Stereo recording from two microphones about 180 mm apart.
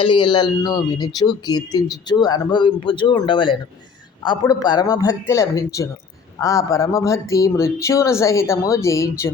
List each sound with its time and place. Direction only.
0.0 s speech: 25° left (ahead or behind)